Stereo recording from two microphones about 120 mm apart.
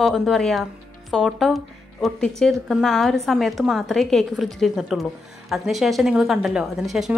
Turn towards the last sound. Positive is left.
turn(degrees=0)  # may be behind; listen again after turning